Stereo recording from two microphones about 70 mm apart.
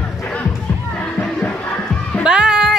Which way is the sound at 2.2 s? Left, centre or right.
Centre.